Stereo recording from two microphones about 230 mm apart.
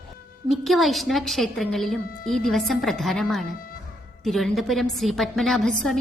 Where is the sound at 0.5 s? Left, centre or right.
Centre.